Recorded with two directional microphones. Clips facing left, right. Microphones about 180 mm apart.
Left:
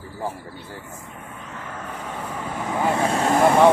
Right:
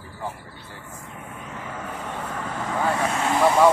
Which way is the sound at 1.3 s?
10° right (ahead or behind).